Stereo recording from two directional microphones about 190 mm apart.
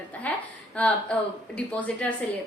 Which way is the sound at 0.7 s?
5° left (ahead or behind).